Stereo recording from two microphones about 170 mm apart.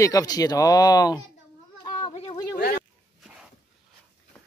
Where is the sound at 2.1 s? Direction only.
35° left (ahead or behind).